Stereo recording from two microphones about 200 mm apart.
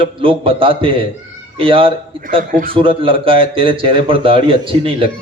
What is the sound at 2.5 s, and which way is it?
Speech, 45° right (ahead or behind).